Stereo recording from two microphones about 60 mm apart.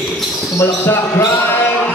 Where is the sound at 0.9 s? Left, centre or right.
Left.